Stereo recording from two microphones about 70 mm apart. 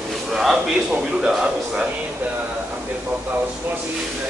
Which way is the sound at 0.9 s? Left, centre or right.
Centre.